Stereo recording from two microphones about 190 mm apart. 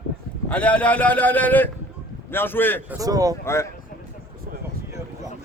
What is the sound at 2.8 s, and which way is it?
Speech, 20° right (ahead or behind).